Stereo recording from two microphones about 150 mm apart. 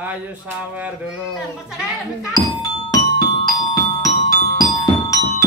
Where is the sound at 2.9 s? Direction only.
25° left (ahead or behind).